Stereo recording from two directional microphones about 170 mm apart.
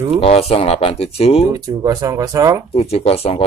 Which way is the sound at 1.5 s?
20° right (ahead or behind).